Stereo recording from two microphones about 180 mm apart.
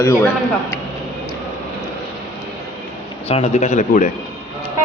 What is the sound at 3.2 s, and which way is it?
Speech, 35° left (ahead or behind).